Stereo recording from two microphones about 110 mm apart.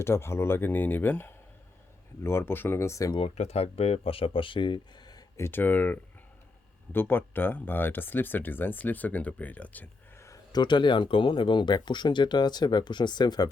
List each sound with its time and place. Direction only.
0.0 s speech: 25° left (ahead or behind)
3.2 s speech: 65° left (ahead or behind); by 5.2 s 40° left (ahead or behind)
5.4 s speech: 20° left (ahead or behind)
10.5 s speech: 45° left (ahead or behind)